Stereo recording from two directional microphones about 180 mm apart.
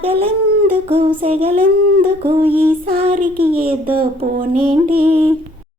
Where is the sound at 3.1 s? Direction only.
50° right (ahead or behind).